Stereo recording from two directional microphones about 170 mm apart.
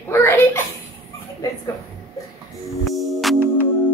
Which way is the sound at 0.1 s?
15° left (ahead or behind).